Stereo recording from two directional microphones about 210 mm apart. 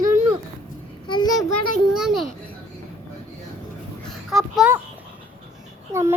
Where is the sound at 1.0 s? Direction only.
20° left (ahead or behind).